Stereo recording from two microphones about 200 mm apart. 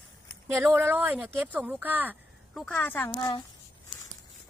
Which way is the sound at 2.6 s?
10° left (ahead or behind).